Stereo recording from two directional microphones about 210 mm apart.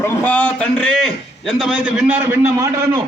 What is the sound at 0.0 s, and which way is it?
A man's voice, 10° left (ahead or behind).